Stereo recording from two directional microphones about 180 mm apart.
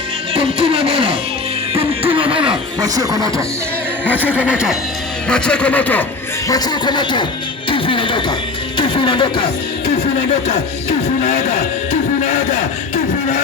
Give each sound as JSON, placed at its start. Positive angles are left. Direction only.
{"t": 0.6, "sound": "music", "side_deg": -35}
{"t": 1.7, "sound": "a sound", "side_deg": -30}
{"t": 2.8, "sound": "speech", "side_deg": -20}
{"t": 4.1, "sound": "speech", "side_deg": -10}
{"t": 6.5, "sound": "speech", "side_deg": 25}
{"t": 10.5, "sound": "speech", "side_deg": 40}